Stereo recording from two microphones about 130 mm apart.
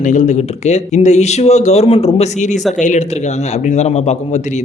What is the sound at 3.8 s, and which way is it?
Speech, 60° left (ahead or behind).